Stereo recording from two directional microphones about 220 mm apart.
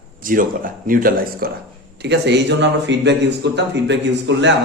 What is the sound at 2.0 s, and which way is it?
A man's voice, 50° right (ahead or behind).